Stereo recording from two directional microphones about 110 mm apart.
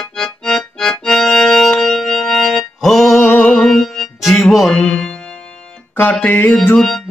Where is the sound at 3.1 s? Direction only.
15° left (ahead or behind).